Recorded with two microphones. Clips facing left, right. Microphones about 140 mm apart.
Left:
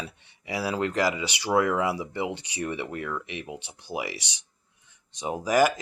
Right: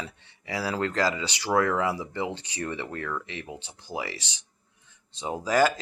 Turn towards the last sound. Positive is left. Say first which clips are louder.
# left 1 dB
turn(degrees=15)  # may be behind; listen again after turning